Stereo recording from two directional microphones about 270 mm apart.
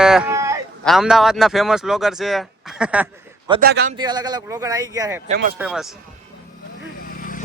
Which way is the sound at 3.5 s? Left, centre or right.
Right.